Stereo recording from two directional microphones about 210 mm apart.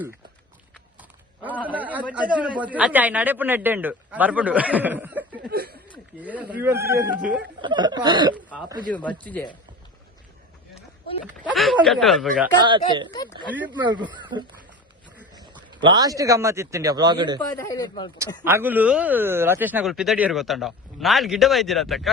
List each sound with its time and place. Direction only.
1.6 s a man's voice: 5° right (ahead or behind)
5.5 s a sound: 45° right (ahead or behind)
6.1 s a man's voice: 5° right (ahead or behind)
7.6 s speech: 20° right (ahead or behind)
8.9 s speech: 5° left (ahead or behind)
11.5 s speech: centre (ahead or behind)
12.6 s speech: 20° right (ahead or behind)
17.6 s speech: 15° left (ahead or behind)
18.4 s speech: 10° right (ahead or behind)